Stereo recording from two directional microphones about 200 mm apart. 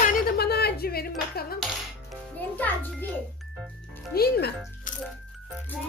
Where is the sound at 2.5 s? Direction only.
10° left (ahead or behind).